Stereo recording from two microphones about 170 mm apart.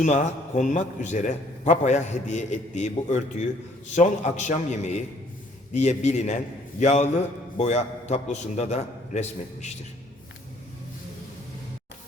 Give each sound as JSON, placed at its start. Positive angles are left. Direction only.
{"t": 0.0, "sound": "a man's voice", "side_deg": 45}